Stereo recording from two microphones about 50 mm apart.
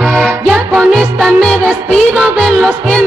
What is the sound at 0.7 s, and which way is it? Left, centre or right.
Music, centre.